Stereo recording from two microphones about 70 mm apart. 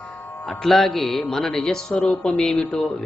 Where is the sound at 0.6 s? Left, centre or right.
Centre.